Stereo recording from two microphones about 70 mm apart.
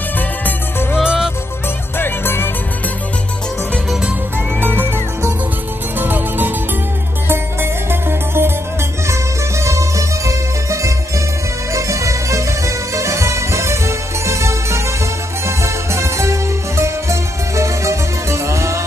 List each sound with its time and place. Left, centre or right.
0.9 s music: centre
2.0 s music: left
4.6 s music: right
9.7 s music: right